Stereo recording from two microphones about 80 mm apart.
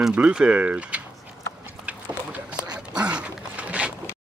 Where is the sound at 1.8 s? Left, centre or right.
Centre.